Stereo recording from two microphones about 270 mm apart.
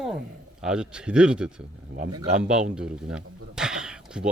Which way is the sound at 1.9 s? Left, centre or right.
Right.